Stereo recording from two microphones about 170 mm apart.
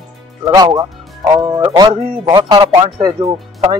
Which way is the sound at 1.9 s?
30° right (ahead or behind).